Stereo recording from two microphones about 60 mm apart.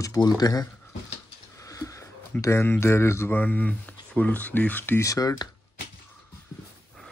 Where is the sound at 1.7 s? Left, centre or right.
Left.